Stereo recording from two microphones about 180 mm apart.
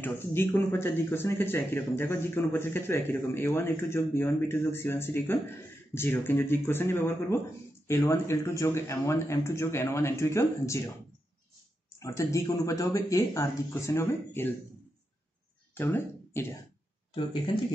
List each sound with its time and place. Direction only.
0.0 s speech: 10° left (ahead or behind)
12.0 s speech: 15° left (ahead or behind)
15.7 s speech: 10° left (ahead or behind)